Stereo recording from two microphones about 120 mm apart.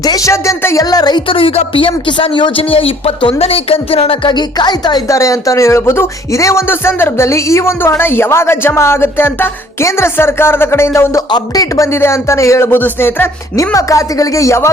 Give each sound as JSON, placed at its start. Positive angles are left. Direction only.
{"t": 0.0, "sound": "speech", "side_deg": 30}
{"t": 11.3, "sound": "speech", "side_deg": 35}